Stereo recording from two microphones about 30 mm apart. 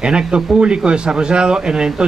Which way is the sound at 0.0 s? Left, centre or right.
Right.